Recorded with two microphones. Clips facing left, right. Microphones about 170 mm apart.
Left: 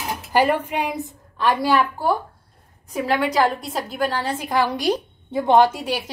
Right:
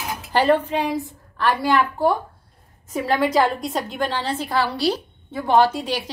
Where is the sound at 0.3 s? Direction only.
10° left (ahead or behind).